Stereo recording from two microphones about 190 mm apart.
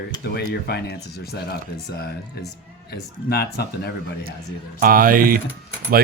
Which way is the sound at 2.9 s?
55° left (ahead or behind).